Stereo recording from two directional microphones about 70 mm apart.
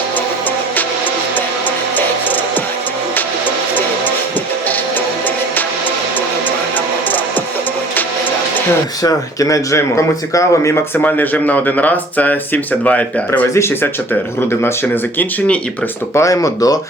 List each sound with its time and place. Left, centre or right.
9.0 s speech: left
11.0 s speech: left
16.1 s speech: left